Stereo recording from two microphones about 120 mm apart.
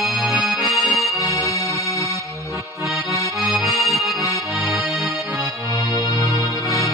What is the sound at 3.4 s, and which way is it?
Accordion, centre (ahead or behind).